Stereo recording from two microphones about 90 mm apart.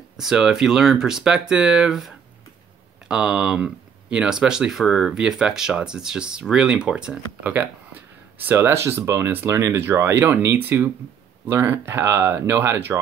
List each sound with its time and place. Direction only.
0.2 s speech: 5° right (ahead or behind); by 13.0 s 30° right (ahead or behind)